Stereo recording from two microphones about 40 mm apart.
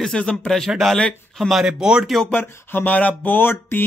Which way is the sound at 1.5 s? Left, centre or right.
Centre.